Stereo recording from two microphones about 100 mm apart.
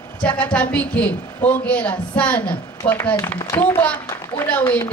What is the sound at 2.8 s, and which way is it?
Speech, 65° left (ahead or behind).